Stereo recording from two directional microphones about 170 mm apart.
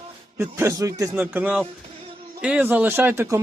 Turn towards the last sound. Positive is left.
turn(degrees=-15)  # may be behind; listen again after turning